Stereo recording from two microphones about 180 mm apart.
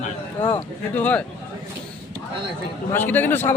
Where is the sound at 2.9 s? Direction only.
10° left (ahead or behind).